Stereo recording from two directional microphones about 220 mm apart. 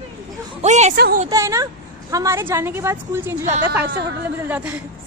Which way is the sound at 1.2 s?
15° right (ahead or behind).